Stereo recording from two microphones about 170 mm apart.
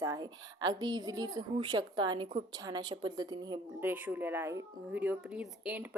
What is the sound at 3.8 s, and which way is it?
Speech, 10° right (ahead or behind).